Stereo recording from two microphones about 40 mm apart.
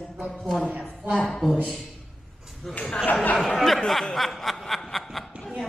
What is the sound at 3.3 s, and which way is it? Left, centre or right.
Speech, centre.